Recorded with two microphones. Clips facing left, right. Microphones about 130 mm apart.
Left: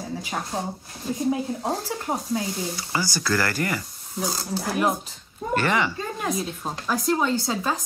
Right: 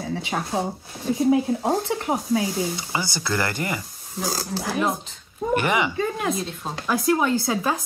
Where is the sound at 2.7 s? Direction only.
20° right (ahead or behind).